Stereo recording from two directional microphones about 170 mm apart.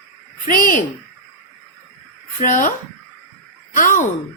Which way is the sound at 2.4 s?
50° left (ahead or behind).